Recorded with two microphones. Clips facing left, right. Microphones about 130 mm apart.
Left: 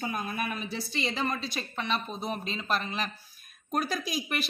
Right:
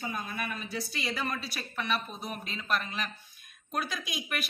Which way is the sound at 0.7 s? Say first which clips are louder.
Left 2 dB; 25° left (ahead or behind).